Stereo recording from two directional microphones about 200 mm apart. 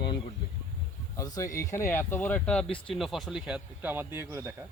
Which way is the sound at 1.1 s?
15° left (ahead or behind).